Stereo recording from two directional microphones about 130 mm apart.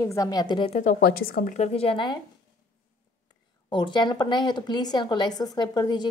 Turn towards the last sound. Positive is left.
turn(degrees=30)  # may be behind; listen again after turning